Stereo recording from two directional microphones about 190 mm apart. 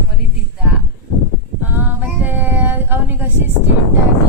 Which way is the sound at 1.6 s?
10° right (ahead or behind).